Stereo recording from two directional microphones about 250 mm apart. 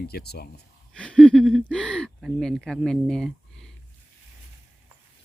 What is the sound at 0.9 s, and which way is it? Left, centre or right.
Speech, centre.